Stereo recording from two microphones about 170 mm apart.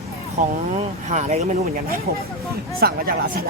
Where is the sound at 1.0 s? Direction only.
40° right (ahead or behind).